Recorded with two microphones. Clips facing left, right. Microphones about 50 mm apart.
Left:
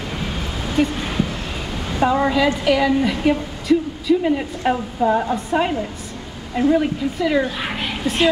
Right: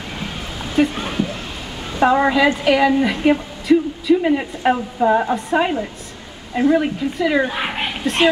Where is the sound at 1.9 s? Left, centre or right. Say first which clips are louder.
Right 3 dB; right.